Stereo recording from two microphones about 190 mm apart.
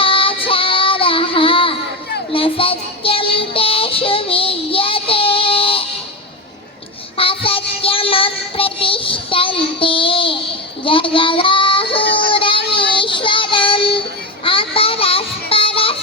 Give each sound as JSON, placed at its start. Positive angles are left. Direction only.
{"t": 0.0, "sound": "child singing", "side_deg": 30}
{"t": 7.2, "sound": "child singing", "side_deg": 30}
{"t": 12.3, "sound": "a sound", "side_deg": 30}
{"t": 12.7, "sound": "child singing", "side_deg": 25}